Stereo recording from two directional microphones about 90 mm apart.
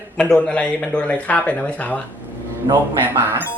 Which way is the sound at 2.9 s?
25° right (ahead or behind).